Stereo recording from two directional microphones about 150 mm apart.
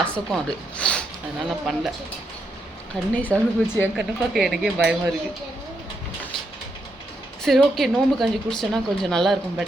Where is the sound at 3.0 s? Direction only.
5° left (ahead or behind).